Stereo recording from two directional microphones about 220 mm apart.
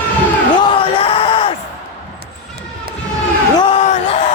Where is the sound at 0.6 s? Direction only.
25° left (ahead or behind).